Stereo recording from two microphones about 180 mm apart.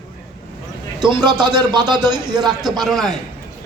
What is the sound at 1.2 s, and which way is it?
Speech, 25° right (ahead or behind).